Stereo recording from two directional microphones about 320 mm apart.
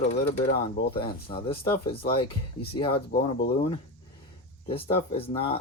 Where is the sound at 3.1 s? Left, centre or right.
Left.